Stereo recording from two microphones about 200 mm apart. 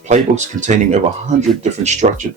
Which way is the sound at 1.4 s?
35° right (ahead or behind).